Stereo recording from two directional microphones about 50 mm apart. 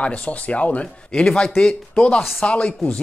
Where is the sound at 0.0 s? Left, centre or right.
Left.